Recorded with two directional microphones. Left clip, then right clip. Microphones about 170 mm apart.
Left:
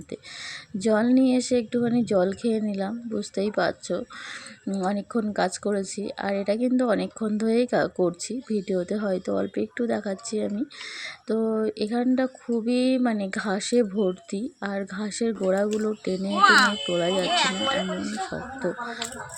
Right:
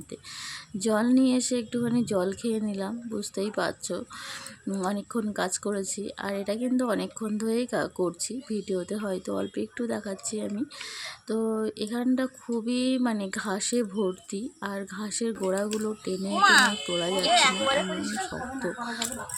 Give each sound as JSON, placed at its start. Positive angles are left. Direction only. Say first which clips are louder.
{"t": 0.8, "sound": "speech", "louder": "left 3 dB", "side_deg": 15}
{"t": 17.2, "sound": "speech", "louder": "right 6 dB", "side_deg": 0}